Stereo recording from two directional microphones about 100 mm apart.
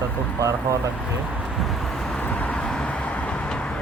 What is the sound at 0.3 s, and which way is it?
Speech, 35° right (ahead or behind).